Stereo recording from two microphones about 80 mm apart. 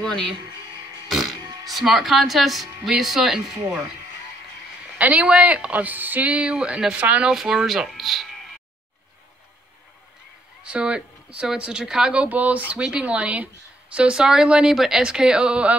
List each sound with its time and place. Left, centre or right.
0.0 s speech: centre
1.7 s speech: centre
4.9 s a woman's voice: centre
7.3 s speech: centre
10.6 s a woman's voice: centre